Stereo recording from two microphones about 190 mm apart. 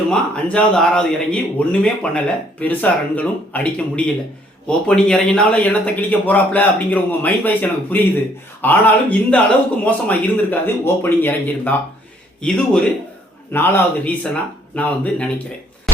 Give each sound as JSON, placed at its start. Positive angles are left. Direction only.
{"t": 0.1, "sound": "a man's voice", "side_deg": 5}